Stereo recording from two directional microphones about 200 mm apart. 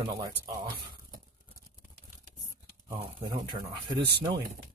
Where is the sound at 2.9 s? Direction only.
20° right (ahead or behind).